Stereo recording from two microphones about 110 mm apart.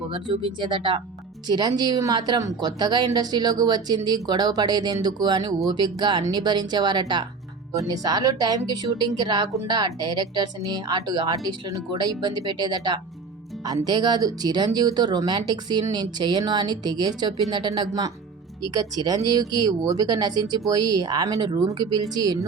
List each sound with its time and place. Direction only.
0.1 s speech: 50° right (ahead or behind)